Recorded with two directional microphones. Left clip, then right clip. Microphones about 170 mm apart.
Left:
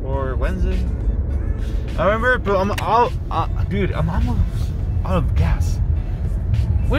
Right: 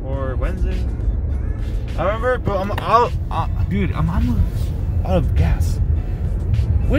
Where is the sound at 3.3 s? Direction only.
15° left (ahead or behind).